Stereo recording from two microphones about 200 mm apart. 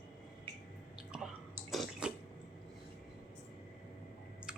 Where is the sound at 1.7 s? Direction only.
5° right (ahead or behind).